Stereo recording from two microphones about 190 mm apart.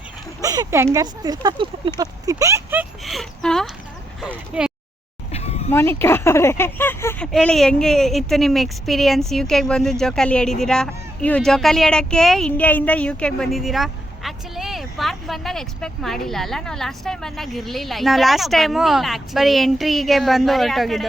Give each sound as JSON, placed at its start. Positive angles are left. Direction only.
{"t": 0.4, "sound": "speech", "side_deg": -20}
{"t": 3.0, "sound": "speech", "side_deg": 0}
{"t": 5.3, "sound": "a sound", "side_deg": 35}
{"t": 5.7, "sound": "speech", "side_deg": 10}